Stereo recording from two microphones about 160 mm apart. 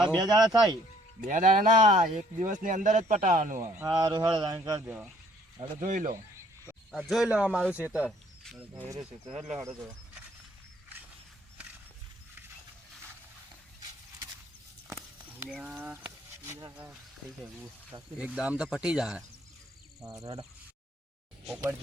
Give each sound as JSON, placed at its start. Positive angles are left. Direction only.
{"t": 0.2, "sound": "speech", "side_deg": -25}
{"t": 1.2, "sound": "speech", "side_deg": -55}
{"t": 3.8, "sound": "speech", "side_deg": -25}
{"t": 5.8, "sound": "speech", "side_deg": -50}
{"t": 6.9, "sound": "speech", "side_deg": 0}
{"t": 15.6, "sound": "speech", "side_deg": -10}
{"t": 16.9, "sound": "speech", "side_deg": -5}
{"t": 20.1, "sound": "speech", "side_deg": -20}
{"t": 21.4, "sound": "speech", "side_deg": -10}